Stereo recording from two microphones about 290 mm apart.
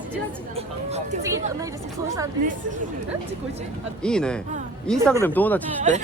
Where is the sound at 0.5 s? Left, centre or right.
Right.